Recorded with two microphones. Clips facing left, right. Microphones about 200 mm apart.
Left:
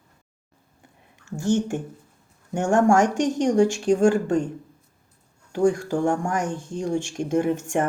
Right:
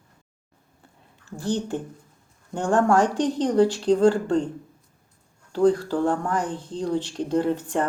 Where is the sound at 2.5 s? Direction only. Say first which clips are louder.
Left 2 dB; 15° left (ahead or behind).